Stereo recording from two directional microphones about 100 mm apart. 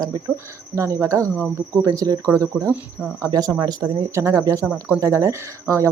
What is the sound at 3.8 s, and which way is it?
Speech, 30° right (ahead or behind).